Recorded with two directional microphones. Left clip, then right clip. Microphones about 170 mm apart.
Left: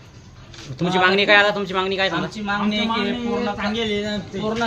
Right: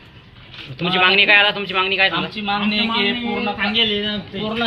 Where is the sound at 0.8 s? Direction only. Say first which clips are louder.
Right 3 dB; 50° left (ahead or behind).